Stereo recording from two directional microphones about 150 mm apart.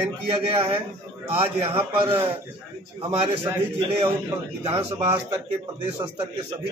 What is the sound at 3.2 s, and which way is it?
A man's voice, 35° right (ahead or behind).